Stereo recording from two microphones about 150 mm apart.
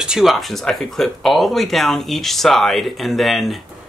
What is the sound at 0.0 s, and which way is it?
Speech, 5° right (ahead or behind).